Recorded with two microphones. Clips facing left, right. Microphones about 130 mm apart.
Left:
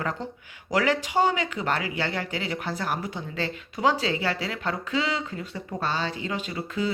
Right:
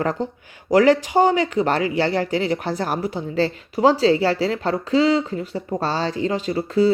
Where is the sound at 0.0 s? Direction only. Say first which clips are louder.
Right 8 dB; 35° right (ahead or behind).